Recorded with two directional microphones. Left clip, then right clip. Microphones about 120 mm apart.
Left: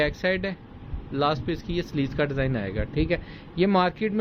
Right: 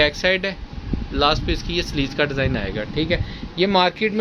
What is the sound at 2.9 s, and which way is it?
Speech, 10° left (ahead or behind).